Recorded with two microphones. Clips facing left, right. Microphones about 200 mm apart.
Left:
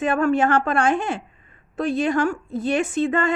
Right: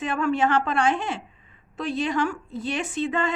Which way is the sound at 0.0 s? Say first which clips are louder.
Left 4 dB; 50° left (ahead or behind).